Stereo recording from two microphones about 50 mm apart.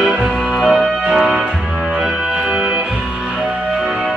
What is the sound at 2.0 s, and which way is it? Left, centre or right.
Music, centre.